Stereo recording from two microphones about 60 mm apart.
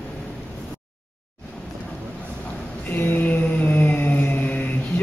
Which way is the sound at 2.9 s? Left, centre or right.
Left.